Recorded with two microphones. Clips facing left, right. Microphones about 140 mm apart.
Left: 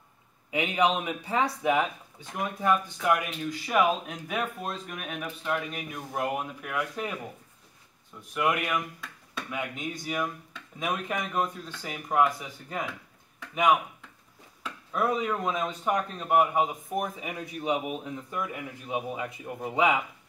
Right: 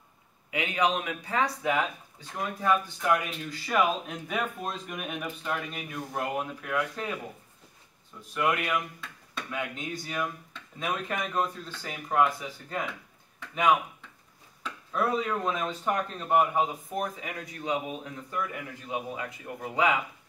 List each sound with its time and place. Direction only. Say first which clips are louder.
0.5 s a man's voice: left 2 dB; 25° left (ahead or behind)
4.1 s speech: even; centre (ahead or behind)
8.4 s speech: even; 5° left (ahead or behind)
14.6 s speech: even; 10° left (ahead or behind)